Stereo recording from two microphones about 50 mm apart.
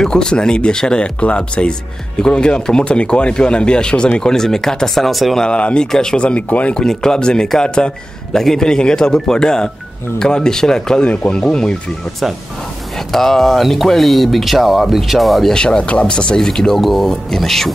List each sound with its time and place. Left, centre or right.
0.0 s speech: centre
5.4 s speech: left
6.1 s speech: left
6.7 s speech: centre
8.3 s speech: centre
11.1 s speech: left
13.1 s speech: centre
15.5 s speech: centre